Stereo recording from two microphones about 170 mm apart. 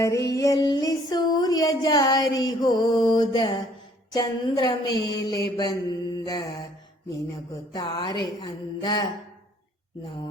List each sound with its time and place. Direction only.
0.0 s mantra: 20° left (ahead or behind)
0.3 s music: 20° left (ahead or behind)
4.1 s mantra: 25° left (ahead or behind)
7.7 s mantra: 20° left (ahead or behind)